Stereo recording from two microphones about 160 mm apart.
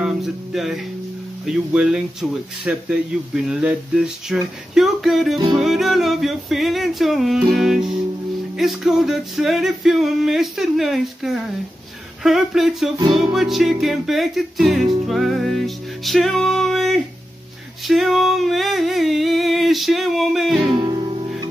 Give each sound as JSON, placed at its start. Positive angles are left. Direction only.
{"t": 0.0, "sound": "music", "side_deg": 0}
{"t": 1.4, "sound": "male singing", "side_deg": -5}
{"t": 4.7, "sound": "a sound", "side_deg": 0}
{"t": 5.5, "sound": "male singing", "side_deg": 0}
{"t": 17.8, "sound": "a sound", "side_deg": 0}
{"t": 20.7, "sound": "music", "side_deg": -30}